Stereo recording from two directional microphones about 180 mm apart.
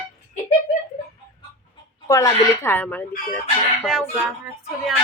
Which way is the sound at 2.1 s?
20° left (ahead or behind).